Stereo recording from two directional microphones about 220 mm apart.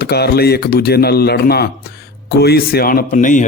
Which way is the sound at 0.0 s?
45° left (ahead or behind).